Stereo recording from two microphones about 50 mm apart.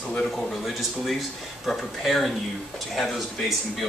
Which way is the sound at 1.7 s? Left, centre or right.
Centre.